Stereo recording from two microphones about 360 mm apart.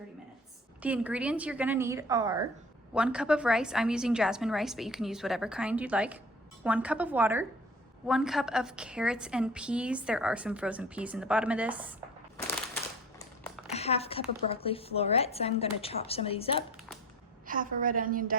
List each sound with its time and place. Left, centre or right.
0.8 s a woman's voice: centre
13.1 s a sound: centre
13.7 s a woman's voice: centre
17.4 s a woman's voice: right